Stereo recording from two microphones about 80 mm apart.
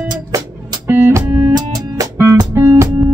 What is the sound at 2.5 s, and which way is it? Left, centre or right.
Music, right.